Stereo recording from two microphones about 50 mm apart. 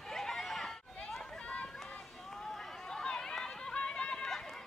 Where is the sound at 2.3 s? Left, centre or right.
Centre.